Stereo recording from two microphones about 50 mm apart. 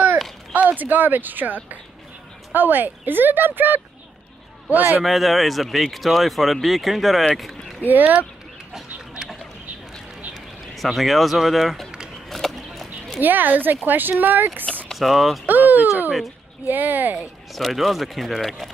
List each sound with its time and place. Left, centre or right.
0.5 s speech: right
5.0 s speech: centre
7.3 s a sound: centre
7.8 s speech: right
10.7 s speech: centre
12.3 s a sound: centre
13.2 s speech: right
14.9 s speech: centre
15.4 s speech: right
17.5 s speech: centre